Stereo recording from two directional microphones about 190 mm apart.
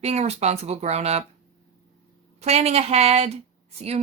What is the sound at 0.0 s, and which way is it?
A woman's voice, 35° right (ahead or behind).